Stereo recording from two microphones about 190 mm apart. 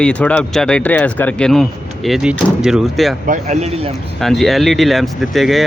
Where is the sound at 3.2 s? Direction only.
35° right (ahead or behind).